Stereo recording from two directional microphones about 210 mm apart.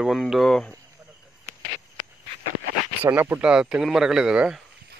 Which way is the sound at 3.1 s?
10° right (ahead or behind).